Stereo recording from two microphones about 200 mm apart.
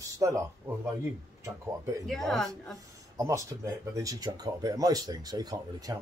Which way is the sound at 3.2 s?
15° right (ahead or behind).